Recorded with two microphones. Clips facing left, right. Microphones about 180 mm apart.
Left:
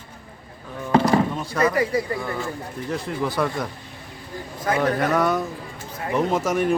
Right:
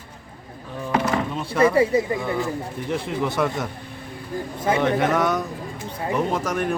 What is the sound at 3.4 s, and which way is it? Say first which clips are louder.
Speech: even; centre (ahead or behind).